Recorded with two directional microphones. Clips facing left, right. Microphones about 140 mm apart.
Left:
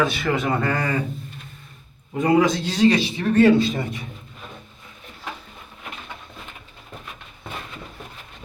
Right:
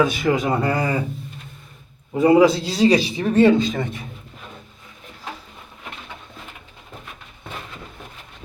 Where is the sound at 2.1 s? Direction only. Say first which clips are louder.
Right 4 dB; 30° right (ahead or behind).